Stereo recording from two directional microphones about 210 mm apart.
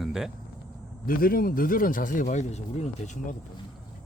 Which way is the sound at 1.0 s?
45° left (ahead or behind).